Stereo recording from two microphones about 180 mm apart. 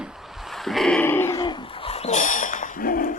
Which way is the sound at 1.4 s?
25° left (ahead or behind).